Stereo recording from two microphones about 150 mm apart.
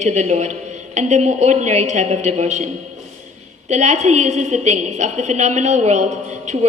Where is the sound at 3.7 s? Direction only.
50° right (ahead or behind).